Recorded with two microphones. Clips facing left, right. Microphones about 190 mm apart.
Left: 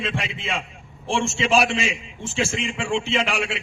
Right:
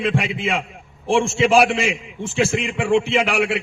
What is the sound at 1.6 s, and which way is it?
A man's voice, 60° right (ahead or behind).